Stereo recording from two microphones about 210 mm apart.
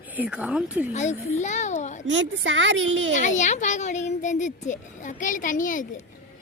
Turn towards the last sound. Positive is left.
turn(degrees=40)  # may be behind; listen again after turning